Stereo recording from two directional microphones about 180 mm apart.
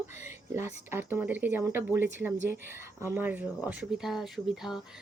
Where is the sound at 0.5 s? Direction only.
15° right (ahead or behind).